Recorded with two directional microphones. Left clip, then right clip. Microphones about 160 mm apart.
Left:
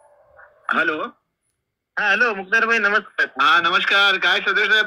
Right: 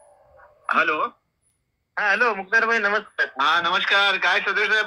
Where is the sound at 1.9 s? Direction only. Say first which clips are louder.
Left 2 dB; 60° left (ahead or behind).